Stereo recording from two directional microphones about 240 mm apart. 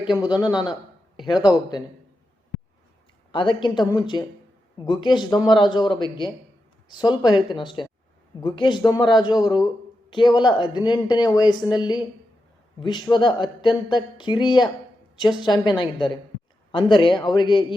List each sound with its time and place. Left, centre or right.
0.2 s speech: centre
0.7 s a sound: centre
3.3 s speech: centre